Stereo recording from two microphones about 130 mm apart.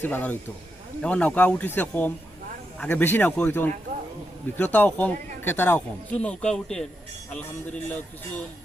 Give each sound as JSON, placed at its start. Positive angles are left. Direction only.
{"t": 0.0, "sound": "speech", "side_deg": 10}